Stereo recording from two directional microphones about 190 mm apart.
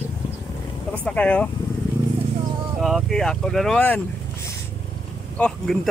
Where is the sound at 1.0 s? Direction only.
5° left (ahead or behind).